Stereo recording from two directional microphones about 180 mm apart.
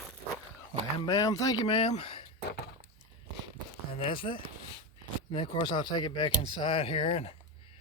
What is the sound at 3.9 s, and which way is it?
Speech, 30° left (ahead or behind).